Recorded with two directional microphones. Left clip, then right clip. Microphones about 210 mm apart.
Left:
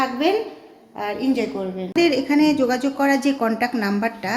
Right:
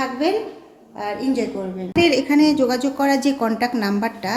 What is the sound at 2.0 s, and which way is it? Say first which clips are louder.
Speech: right 2 dB; centre (ahead or behind).